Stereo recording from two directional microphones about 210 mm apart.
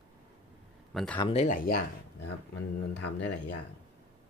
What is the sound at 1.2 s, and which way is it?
Speech, 30° left (ahead or behind).